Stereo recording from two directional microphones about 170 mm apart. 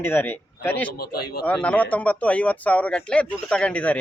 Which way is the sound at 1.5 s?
10° left (ahead or behind).